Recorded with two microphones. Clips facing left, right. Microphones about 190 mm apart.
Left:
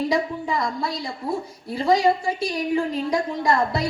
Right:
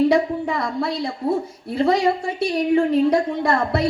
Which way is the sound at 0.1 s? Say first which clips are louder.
Right 4 dB; 60° right (ahead or behind).